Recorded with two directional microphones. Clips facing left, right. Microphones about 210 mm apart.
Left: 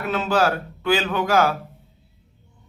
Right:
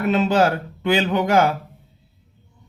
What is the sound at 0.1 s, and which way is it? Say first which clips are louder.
A man's voice: right 2 dB; 20° right (ahead or behind).